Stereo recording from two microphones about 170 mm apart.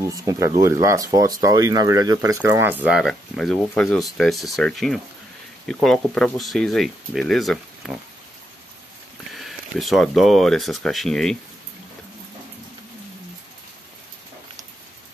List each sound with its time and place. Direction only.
0.1 s speech: 20° right (ahead or behind); by 8.0 s centre (ahead or behind)
9.3 s speech: centre (ahead or behind)